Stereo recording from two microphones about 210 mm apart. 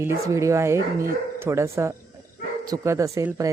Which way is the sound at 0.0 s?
15° right (ahead or behind).